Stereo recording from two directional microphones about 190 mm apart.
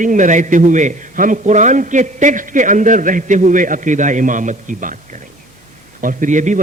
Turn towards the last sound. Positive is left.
turn(degrees=-40)  # may be behind; listen again after turning